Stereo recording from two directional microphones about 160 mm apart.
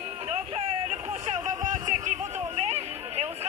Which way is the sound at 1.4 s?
50° right (ahead or behind).